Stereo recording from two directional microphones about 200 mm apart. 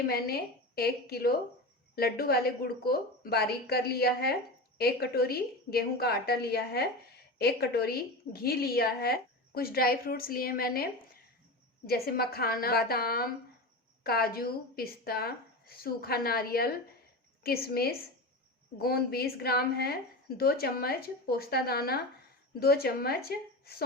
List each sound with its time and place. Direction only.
0.1 s a woman's voice: 50° left (ahead or behind)
11.9 s a woman's voice: 50° left (ahead or behind)